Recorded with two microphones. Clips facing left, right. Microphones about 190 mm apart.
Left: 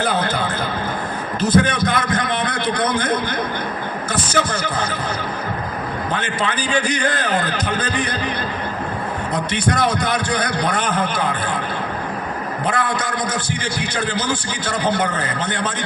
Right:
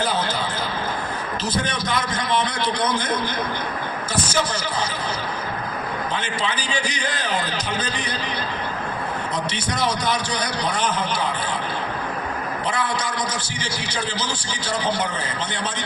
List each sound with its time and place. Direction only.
0.0 s a sound: 55° left (ahead or behind)
4.1 s a man's voice: 55° left (ahead or behind)
6.1 s a man's voice: 55° left (ahead or behind)
9.3 s a man's voice: 55° left (ahead or behind)
12.6 s a man's voice: 55° left (ahead or behind)